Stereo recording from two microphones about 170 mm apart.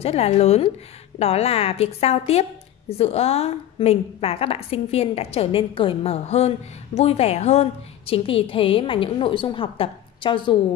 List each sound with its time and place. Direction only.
0.0 s a woman's voice: 35° left (ahead or behind)